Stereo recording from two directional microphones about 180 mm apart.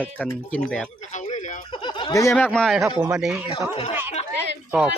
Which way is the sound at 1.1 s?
40° left (ahead or behind).